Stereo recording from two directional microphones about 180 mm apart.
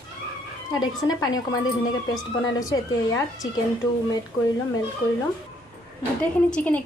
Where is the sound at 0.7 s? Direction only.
20° left (ahead or behind).